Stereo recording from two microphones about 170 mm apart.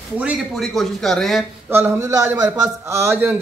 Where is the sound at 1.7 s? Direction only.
15° right (ahead or behind).